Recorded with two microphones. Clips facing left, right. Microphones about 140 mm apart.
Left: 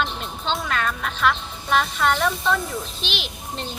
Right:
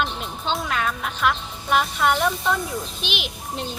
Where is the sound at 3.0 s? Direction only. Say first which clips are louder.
Right 1 dB; 50° right (ahead or behind).